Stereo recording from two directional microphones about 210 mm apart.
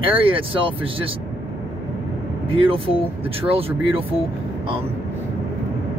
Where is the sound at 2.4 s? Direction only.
25° right (ahead or behind).